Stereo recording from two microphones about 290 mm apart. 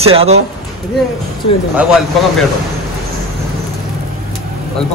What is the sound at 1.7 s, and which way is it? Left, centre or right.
Speech, centre.